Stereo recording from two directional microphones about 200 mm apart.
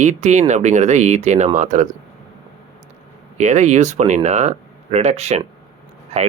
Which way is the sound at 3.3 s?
35° right (ahead or behind).